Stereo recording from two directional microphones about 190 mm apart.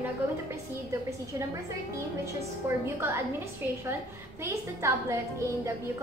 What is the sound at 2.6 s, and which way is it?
A woman's voice, 15° right (ahead or behind).